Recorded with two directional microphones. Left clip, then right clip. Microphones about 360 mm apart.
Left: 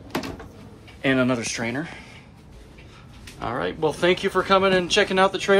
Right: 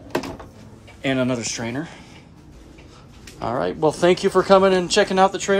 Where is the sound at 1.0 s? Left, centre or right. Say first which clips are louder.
Left 1 dB; centre.